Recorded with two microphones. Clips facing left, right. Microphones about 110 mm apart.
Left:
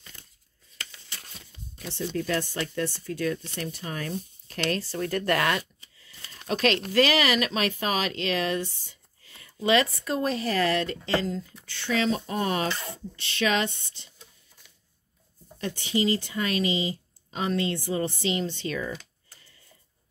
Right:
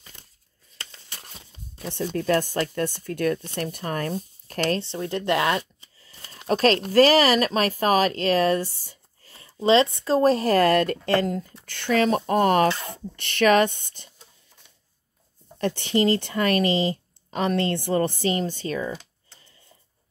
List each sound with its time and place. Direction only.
1.3 s a sound: 25° right (ahead or behind)
1.9 s speech: 50° right (ahead or behind)
4.7 s speech: 25° right (ahead or behind)
6.3 s a sound: 35° right (ahead or behind)
6.9 s speech: 40° right (ahead or behind)
15.6 s speech: 60° right (ahead or behind); by 18.9 s 40° right (ahead or behind)
18.9 s computer keyboard: 25° right (ahead or behind)